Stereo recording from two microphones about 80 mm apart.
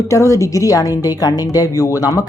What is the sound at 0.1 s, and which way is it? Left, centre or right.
A woman's voice, left.